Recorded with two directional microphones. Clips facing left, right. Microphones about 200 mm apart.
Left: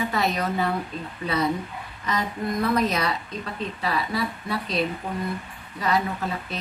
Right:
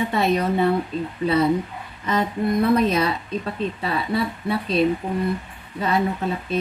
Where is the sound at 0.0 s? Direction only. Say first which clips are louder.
Right 5 dB; 30° right (ahead or behind).